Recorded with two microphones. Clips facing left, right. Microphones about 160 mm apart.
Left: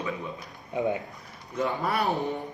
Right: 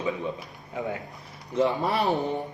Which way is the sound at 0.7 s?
20° left (ahead or behind).